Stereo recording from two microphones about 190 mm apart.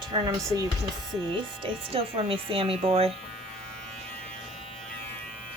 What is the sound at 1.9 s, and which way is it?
A woman's voice, 30° right (ahead or behind).